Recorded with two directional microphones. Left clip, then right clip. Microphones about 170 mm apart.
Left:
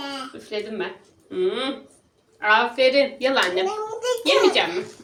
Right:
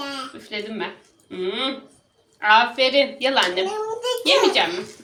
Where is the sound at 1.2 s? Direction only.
35° left (ahead or behind).